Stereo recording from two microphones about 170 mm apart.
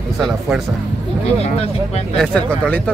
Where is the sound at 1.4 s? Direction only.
40° left (ahead or behind).